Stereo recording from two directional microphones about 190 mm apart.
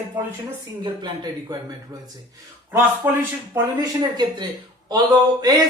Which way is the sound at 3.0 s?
10° right (ahead or behind).